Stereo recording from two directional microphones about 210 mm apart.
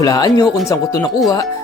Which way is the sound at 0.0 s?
20° left (ahead or behind).